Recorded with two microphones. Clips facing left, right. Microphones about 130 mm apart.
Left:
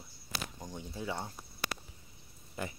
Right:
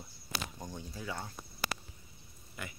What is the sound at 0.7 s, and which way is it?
Speech, 25° left (ahead or behind).